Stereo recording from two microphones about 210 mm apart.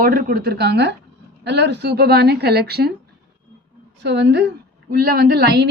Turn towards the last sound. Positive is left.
turn(degrees=-50)  # may be behind; listen again after turning